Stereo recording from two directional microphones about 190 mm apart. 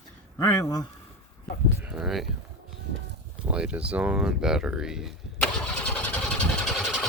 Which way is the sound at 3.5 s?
5° right (ahead or behind).